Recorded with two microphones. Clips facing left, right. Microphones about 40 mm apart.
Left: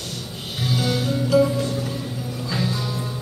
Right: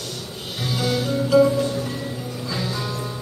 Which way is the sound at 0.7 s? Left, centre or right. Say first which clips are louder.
Right 1 dB; centre.